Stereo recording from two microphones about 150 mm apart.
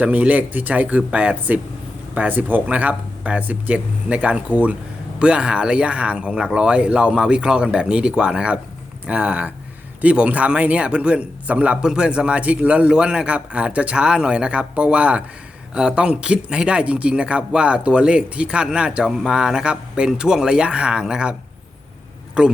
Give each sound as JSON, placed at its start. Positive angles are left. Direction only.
{"t": 0.0, "sound": "speech", "side_deg": -10}
{"t": 22.4, "sound": "speech", "side_deg": -5}